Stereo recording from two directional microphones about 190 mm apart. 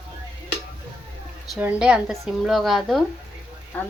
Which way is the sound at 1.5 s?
5° right (ahead or behind).